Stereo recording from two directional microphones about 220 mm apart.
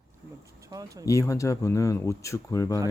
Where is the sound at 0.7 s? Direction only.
15° right (ahead or behind).